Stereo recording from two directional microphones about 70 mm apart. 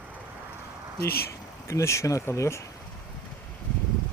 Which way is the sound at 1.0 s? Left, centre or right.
Left.